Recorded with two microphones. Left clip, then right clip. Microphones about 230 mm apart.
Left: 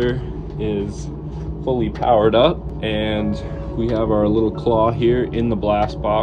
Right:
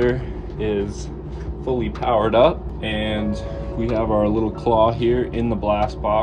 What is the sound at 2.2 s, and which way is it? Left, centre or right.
Speech, centre.